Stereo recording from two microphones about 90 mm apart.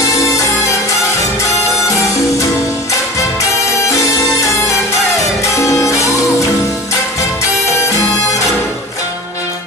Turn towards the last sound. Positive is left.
turn(degrees=35)  # may be behind; listen again after turning